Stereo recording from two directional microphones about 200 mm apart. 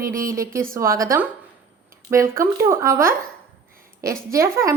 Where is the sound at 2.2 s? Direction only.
45° right (ahead or behind).